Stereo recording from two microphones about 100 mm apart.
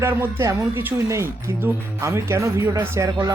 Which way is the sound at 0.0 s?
25° right (ahead or behind).